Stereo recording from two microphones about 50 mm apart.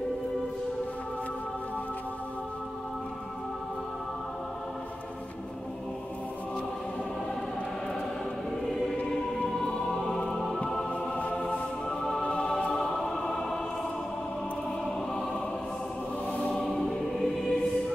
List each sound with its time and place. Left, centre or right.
9.6 s music: centre
10.9 s music: left
11.3 s music: centre
16.3 s choir: left
16.8 s choir: centre